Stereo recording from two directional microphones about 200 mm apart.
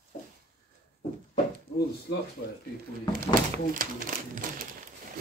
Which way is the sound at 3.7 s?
45° right (ahead or behind).